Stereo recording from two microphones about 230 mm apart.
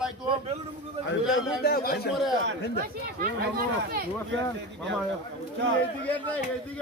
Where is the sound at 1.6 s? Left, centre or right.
Left.